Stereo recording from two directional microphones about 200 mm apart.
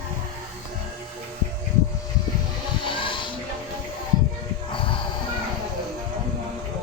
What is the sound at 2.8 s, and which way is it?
Vehicle, 25° left (ahead or behind).